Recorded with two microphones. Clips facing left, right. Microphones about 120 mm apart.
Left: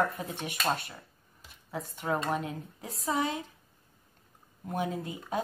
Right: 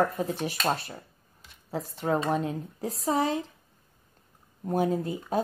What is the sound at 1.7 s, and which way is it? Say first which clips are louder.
Speech: right 4 dB; 30° right (ahead or behind).